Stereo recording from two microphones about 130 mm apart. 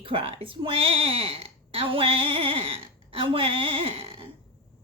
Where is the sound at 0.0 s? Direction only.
45° right (ahead or behind).